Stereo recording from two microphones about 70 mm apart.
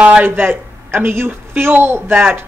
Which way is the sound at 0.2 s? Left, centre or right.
Right.